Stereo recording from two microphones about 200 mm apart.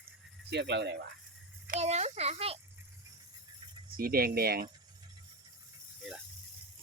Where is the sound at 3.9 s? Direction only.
45° right (ahead or behind).